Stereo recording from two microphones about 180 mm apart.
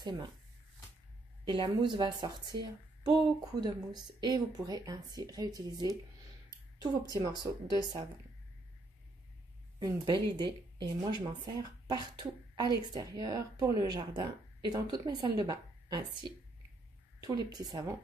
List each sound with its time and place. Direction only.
1.4 s a woman's voice: 25° right (ahead or behind)
9.8 s a woman's voice: 20° right (ahead or behind)